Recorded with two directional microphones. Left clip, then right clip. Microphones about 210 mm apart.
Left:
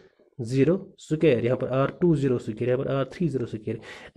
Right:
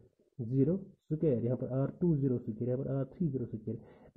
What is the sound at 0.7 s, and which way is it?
Speech, 10° left (ahead or behind).